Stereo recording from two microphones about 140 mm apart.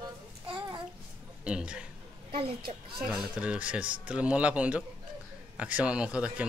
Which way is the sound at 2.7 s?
55° right (ahead or behind).